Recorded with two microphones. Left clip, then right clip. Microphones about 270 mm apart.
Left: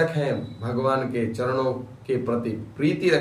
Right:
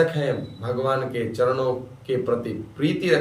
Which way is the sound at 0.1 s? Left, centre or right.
Centre.